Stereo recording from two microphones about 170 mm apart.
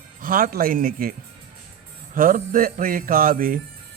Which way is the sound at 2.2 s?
55° right (ahead or behind).